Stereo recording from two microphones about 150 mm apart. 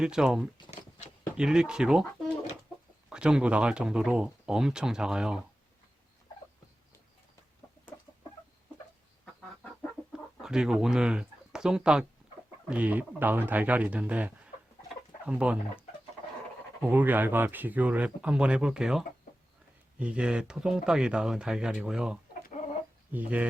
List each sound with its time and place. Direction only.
0.0 s speech: 5° right (ahead or behind)
0.7 s a sound: 50° left (ahead or behind)
1.4 s speech: 5° right (ahead or behind)
3.1 s speech: 5° right (ahead or behind)
10.4 s speech: 5° right (ahead or behind)
16.8 s speech: 10° right (ahead or behind)